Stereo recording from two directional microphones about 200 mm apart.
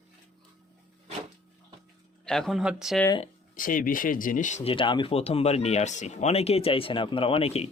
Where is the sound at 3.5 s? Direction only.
45° left (ahead or behind).